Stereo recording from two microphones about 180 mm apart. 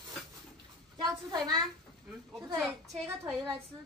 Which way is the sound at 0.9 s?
25° right (ahead or behind).